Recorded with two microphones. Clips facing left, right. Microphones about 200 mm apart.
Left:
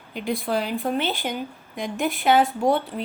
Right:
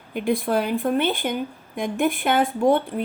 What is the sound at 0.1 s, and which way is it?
Speech, 50° right (ahead or behind).